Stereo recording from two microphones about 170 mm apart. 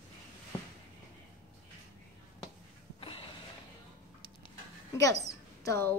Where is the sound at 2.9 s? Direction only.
35° left (ahead or behind).